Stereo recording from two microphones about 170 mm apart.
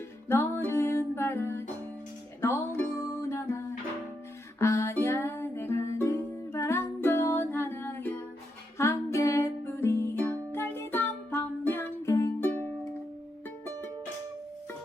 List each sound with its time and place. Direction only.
0.3 s music: 15° left (ahead or behind)
4.6 s music: 15° left (ahead or behind)